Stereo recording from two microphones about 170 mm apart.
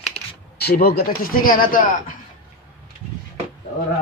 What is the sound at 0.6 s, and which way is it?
Speech, 70° left (ahead or behind).